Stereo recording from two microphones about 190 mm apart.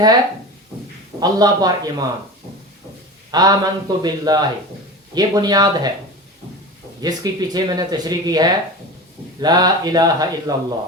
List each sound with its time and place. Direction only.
1.2 s speech: 20° right (ahead or behind)
3.3 s speech: 20° right (ahead or behind)
7.0 s speech: 20° right (ahead or behind)